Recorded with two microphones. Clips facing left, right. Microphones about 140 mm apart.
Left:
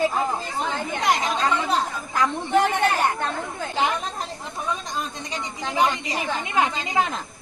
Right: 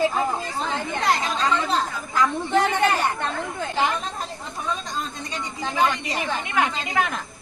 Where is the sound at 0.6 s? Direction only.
15° left (ahead or behind).